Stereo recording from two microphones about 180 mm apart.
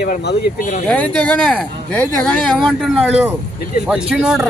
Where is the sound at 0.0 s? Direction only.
65° left (ahead or behind).